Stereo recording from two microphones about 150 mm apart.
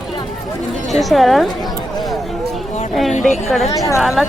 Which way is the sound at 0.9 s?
Centre (ahead or behind).